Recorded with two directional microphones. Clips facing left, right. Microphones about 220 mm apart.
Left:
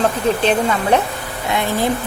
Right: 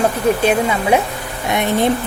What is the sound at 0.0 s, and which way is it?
Speech, 10° right (ahead or behind).